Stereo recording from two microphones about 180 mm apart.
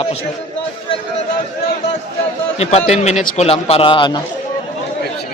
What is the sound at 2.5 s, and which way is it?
A man's voice, 35° left (ahead or behind).